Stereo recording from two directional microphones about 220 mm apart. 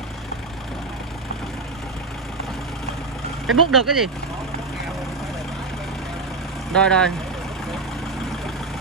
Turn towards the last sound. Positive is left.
turn(degrees=5)  # may be behind; listen again after turning